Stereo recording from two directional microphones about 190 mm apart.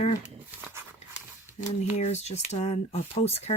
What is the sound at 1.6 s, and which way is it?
Speech, 35° left (ahead or behind).